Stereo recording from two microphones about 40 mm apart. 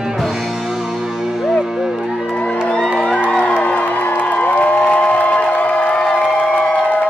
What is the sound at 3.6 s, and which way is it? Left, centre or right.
Music, left.